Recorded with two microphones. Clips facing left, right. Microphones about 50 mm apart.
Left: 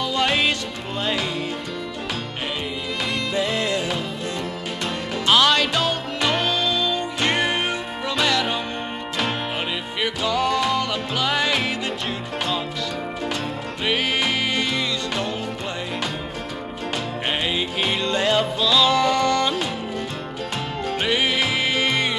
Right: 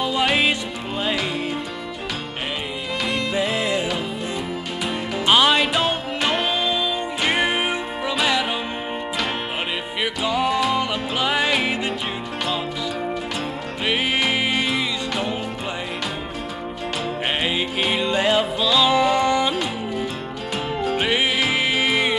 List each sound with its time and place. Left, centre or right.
0.0 s music: centre
3.3 s music: centre
5.2 s music: centre
9.9 s music: centre
13.8 s music: centre
17.3 s music: centre
20.9 s music: centre